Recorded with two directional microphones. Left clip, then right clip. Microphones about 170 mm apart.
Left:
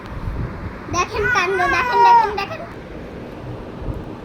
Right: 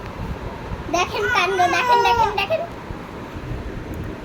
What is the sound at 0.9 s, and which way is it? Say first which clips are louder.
A child's voice: left 1 dB; 35° right (ahead or behind).